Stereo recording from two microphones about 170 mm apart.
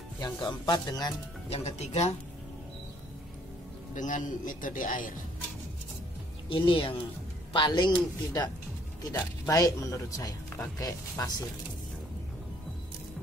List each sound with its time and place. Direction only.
0.2 s speech: 25° left (ahead or behind)
1.5 s speech: 40° left (ahead or behind)
3.9 s speech: 50° left (ahead or behind)
6.5 s speech: 30° left (ahead or behind)